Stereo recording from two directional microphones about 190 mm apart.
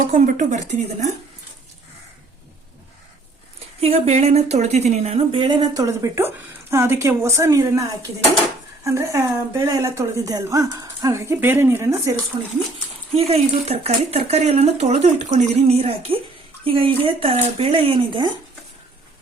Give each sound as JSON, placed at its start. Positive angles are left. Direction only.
{"t": 0.1, "sound": "speech", "side_deg": -40}
{"t": 3.8, "sound": "a woman's voice", "side_deg": -35}